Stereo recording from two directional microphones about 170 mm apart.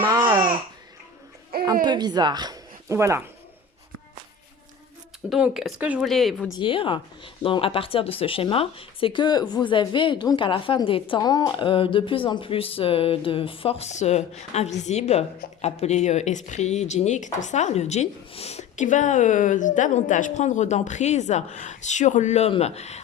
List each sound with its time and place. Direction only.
0.1 s babbling: 25° right (ahead or behind)
1.8 s speech: 25° right (ahead or behind)
5.3 s speech: centre (ahead or behind)
6.5 s a woman's voice: 30° left (ahead or behind)